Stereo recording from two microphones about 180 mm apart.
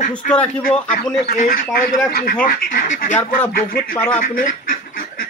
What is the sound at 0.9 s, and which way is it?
Speech, 50° left (ahead or behind).